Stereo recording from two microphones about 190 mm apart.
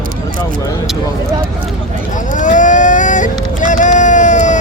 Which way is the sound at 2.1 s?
40° left (ahead or behind).